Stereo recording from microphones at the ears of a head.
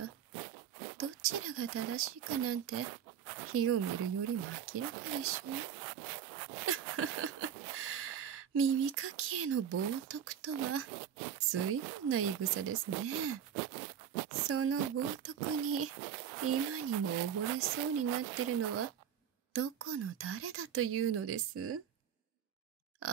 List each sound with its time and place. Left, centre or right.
0.0 s speech: right